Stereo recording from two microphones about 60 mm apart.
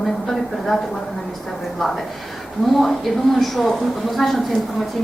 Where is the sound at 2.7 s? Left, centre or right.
Centre.